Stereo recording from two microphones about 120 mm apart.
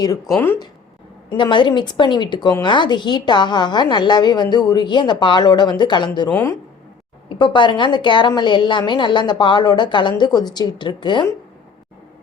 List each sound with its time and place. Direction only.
0.3 s speech: 20° left (ahead or behind)
1.4 s a woman's voice: 40° left (ahead or behind)
6.3 s speech: 20° left (ahead or behind)
7.3 s a woman's voice: 40° left (ahead or behind)